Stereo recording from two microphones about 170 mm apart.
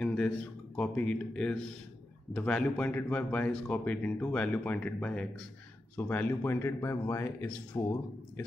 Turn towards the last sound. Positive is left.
turn(degrees=15)  # may be behind; listen again after turning